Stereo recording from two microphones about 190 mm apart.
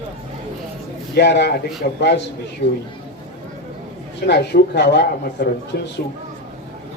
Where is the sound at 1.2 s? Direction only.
65° left (ahead or behind).